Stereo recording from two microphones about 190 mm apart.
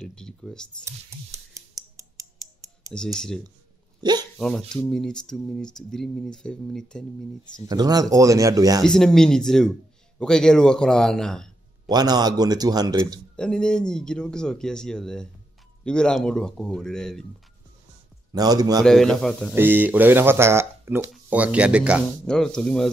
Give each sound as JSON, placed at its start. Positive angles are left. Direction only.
{"t": 0.0, "sound": "a sound", "side_deg": 5}
{"t": 0.8, "sound": "a sound", "side_deg": -15}
{"t": 3.2, "sound": "speech", "side_deg": 5}
{"t": 4.0, "sound": "speech", "side_deg": -20}
{"t": 4.4, "sound": "speech", "side_deg": 5}
{"t": 7.6, "sound": "a man's voice", "side_deg": -20}
{"t": 8.8, "sound": "speech", "side_deg": 5}
{"t": 11.9, "sound": "a man's voice", "side_deg": -20}
{"t": 13.4, "sound": "speech", "side_deg": 5}
{"t": 18.3, "sound": "a man's voice", "side_deg": -20}
{"t": 18.9, "sound": "speech", "side_deg": 0}
{"t": 19.5, "sound": "speech", "side_deg": -10}